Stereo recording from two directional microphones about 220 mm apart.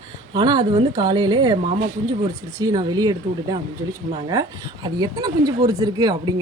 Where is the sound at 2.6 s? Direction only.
15° right (ahead or behind).